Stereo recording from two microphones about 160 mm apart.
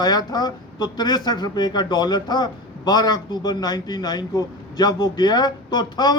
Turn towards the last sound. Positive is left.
turn(degrees=25)  # may be behind; listen again after turning